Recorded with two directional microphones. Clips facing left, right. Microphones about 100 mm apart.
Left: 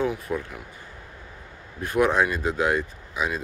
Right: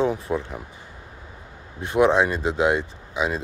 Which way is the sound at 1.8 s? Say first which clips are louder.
Right 3 dB; 20° right (ahead or behind).